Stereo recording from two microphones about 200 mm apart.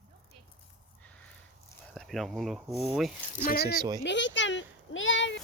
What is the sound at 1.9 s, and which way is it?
Speech, centre (ahead or behind).